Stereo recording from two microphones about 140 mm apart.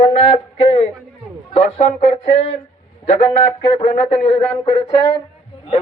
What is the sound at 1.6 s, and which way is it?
Speech, 60° left (ahead or behind).